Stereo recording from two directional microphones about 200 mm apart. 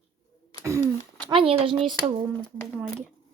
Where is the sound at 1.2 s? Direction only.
25° right (ahead or behind).